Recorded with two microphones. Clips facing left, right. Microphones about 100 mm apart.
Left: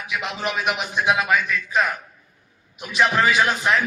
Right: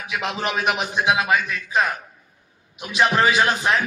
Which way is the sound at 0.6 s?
25° right (ahead or behind).